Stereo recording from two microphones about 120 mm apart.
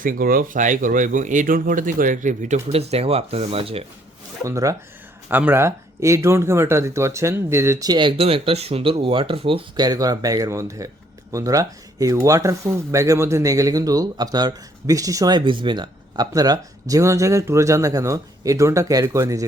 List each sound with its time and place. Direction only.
0.4 s speech: 90° right; by 3.8 s 55° right (ahead or behind)
4.4 s speech: 25° right (ahead or behind); by 9.8 s 45° right (ahead or behind)
9.8 s speech: 30° right (ahead or behind)